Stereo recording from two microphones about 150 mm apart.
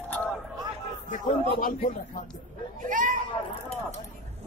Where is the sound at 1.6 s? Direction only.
65° left (ahead or behind).